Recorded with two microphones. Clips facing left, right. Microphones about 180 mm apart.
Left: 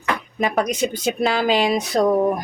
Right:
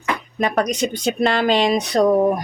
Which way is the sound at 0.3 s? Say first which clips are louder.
Right 1 dB; centre (ahead or behind).